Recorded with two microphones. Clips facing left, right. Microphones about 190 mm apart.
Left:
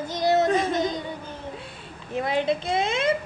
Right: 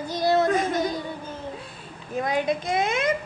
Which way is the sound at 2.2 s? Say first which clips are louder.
Even; 25° left (ahead or behind).